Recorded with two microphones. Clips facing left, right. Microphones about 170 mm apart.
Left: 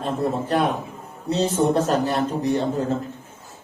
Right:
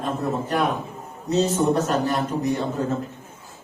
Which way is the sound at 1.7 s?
30° left (ahead or behind).